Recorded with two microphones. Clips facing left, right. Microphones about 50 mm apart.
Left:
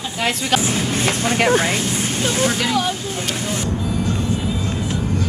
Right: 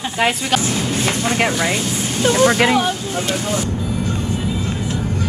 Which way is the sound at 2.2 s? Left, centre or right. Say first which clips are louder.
Right 8 dB; right.